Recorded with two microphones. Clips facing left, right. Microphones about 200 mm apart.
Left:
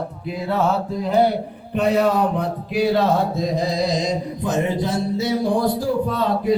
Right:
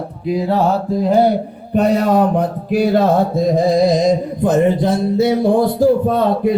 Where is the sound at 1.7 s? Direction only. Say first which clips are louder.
Right 4 dB; 45° right (ahead or behind).